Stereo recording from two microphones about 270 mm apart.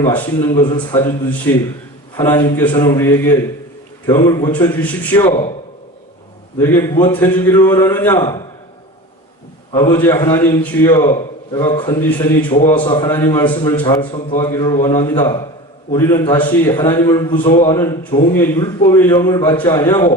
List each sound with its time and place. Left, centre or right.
0.0 s a man's voice: centre
5.2 s a man's voice: left
6.6 s a man's voice: centre
9.7 s a man's voice: centre